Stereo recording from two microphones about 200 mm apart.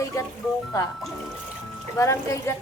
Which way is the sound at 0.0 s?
15° left (ahead or behind).